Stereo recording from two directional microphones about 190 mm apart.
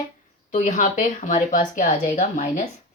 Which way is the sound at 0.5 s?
40° left (ahead or behind).